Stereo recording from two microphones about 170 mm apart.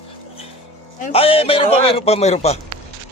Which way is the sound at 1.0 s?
35° left (ahead or behind).